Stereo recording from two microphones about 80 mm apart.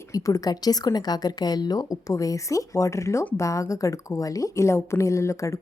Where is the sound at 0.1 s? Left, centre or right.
Left.